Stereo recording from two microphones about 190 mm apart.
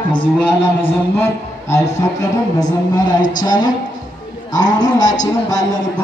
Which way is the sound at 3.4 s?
20° left (ahead or behind).